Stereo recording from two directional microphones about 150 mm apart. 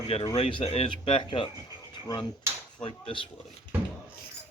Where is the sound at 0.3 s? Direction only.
40° left (ahead or behind).